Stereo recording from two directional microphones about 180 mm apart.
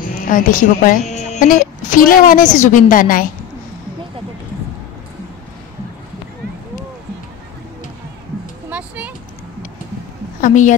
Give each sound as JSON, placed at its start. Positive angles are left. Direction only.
{"t": 0.0, "sound": "a woman's voice", "side_deg": 50}
{"t": 8.6, "sound": "a sound", "side_deg": -10}
{"t": 10.4, "sound": "a woman's voice", "side_deg": 45}